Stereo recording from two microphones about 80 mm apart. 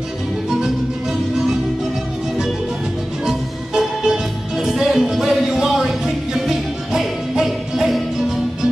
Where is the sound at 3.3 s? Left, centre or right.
Centre.